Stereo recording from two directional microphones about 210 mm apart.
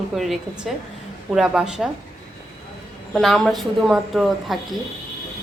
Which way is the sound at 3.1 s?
Centre (ahead or behind).